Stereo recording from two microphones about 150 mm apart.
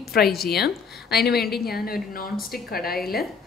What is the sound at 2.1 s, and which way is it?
Speech, 80° left.